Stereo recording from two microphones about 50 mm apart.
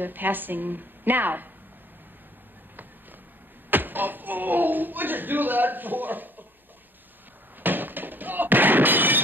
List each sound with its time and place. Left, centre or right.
0.0 s a woman's voice: right
3.7 s speech: right
7.6 s a sound: right